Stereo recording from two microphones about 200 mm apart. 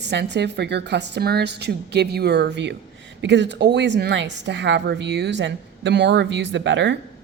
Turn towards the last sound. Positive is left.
turn(degrees=-65)  # may be behind; listen again after turning